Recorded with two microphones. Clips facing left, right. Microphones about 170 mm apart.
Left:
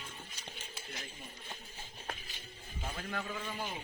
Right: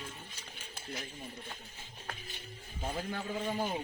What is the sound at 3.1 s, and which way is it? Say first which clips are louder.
Speech: right 2 dB; 30° right (ahead or behind).